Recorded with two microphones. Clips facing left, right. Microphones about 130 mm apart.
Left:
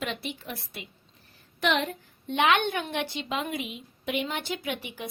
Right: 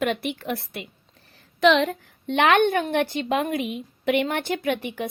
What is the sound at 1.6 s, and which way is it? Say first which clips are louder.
A woman's voice: right 8 dB; 90° right.